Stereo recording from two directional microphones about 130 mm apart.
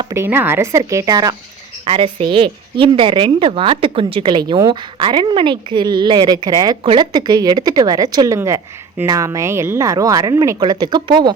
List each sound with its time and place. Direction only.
0.1 s speech: 15° right (ahead or behind)
1.8 s a woman's voice: 50° right (ahead or behind); by 10.6 s 25° right (ahead or behind)
10.6 s a woman's voice: 35° right (ahead or behind)